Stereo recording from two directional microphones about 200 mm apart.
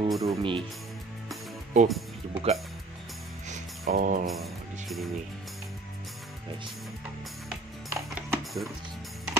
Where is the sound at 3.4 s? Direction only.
40° right (ahead or behind).